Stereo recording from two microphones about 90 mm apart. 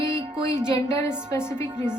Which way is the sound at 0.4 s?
30° left (ahead or behind).